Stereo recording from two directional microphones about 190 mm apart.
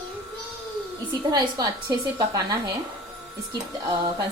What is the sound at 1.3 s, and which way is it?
A child's voice, 20° right (ahead or behind).